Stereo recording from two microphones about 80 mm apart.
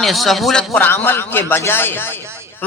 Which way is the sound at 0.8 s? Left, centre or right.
Left.